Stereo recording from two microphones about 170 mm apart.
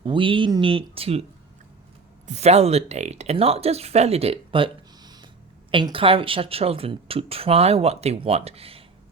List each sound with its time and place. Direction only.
0.0 s speech: 30° right (ahead or behind)
2.2 s speech: 40° right (ahead or behind)